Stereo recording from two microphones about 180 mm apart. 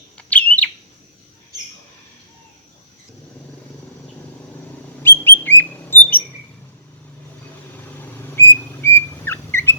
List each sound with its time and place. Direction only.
0.2 s bird: 5° left (ahead or behind)
5.0 s bird: 10° left (ahead or behind)
8.8 s a sound: 15° left (ahead or behind)